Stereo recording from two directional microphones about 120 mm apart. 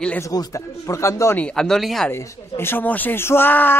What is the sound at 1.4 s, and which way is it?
Speech, 5° left (ahead or behind).